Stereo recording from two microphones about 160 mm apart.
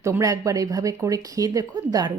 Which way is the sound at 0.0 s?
20° right (ahead or behind).